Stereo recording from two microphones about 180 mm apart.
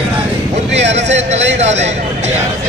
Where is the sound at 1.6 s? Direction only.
40° right (ahead or behind).